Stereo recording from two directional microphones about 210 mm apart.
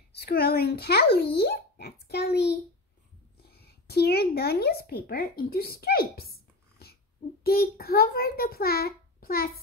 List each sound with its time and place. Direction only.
0.1 s a child's voice: 50° left (ahead or behind)
6.8 s a sound: 50° left (ahead or behind)
7.4 s a child's voice: 45° left (ahead or behind)